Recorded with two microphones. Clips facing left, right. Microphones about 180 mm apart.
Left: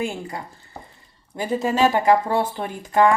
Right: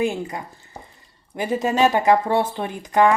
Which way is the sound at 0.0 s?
20° right (ahead or behind).